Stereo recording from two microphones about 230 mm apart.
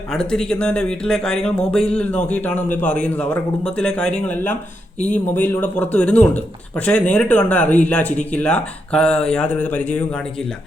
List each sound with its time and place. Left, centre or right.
0.1 s a man's voice: centre
4.9 s speech: left
5.3 s a man's voice: centre